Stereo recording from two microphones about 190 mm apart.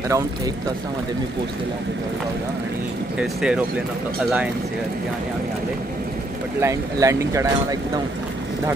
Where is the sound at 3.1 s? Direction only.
5° right (ahead or behind).